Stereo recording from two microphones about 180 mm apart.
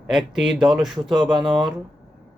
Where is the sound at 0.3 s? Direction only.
5° right (ahead or behind).